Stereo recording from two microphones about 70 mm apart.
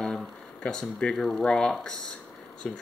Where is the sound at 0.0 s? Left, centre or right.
Centre.